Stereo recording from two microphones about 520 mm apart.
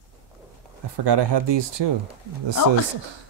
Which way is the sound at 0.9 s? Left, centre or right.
Right.